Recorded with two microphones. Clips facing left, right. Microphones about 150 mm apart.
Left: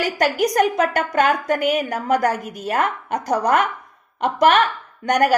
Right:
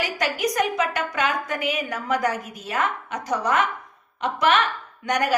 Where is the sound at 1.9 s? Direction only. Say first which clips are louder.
Left 5 dB; 45° left (ahead or behind).